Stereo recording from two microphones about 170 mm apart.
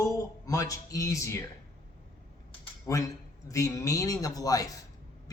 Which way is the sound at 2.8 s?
20° left (ahead or behind).